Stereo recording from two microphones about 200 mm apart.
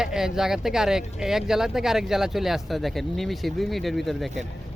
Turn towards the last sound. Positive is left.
turn(degrees=0)  # may be behind; listen again after turning